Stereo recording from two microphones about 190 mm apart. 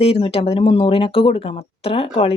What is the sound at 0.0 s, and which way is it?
Speech, 30° left (ahead or behind).